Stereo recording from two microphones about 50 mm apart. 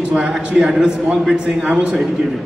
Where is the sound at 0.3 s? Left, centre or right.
Centre.